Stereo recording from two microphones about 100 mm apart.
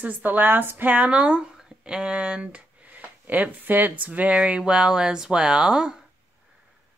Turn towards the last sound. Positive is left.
turn(degrees=-5)  # may be behind; listen again after turning